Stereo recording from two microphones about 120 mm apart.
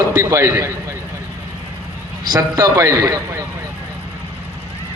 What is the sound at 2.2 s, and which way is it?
Speech, 35° right (ahead or behind).